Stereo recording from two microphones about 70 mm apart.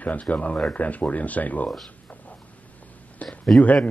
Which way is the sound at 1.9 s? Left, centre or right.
Left.